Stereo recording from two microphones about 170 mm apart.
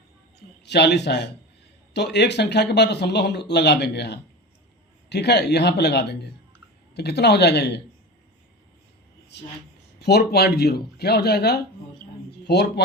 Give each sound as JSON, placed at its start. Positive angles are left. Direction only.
{"t": 0.3, "sound": "speech", "side_deg": 85}
{"t": 9.3, "sound": "speech", "side_deg": 90}
{"t": 10.0, "sound": "speech", "side_deg": 75}